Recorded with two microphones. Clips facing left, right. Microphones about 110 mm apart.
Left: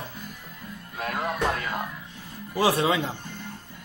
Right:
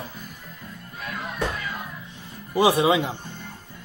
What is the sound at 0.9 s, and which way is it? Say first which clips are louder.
Music: left 4 dB; 60° left (ahead or behind).